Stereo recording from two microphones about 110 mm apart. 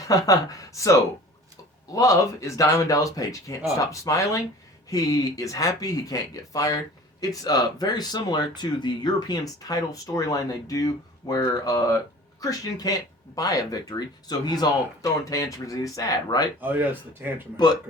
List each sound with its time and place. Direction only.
0.1 s speech: 30° left (ahead or behind)
2.0 s speech: 30° left (ahead or behind)
16.6 s speech: 15° right (ahead or behind)